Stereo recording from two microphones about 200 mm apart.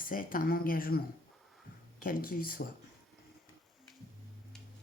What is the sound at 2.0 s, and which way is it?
Speech, 45° left (ahead or behind).